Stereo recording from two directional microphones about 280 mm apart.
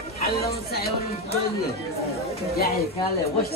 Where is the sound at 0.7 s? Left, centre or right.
Left.